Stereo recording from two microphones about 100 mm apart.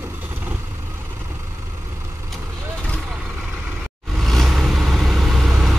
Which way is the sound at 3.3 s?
5° right (ahead or behind).